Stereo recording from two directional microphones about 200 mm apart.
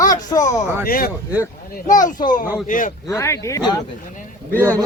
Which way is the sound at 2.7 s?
40° left (ahead or behind).